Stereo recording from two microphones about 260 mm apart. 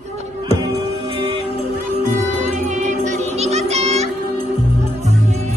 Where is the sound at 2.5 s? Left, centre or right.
Right.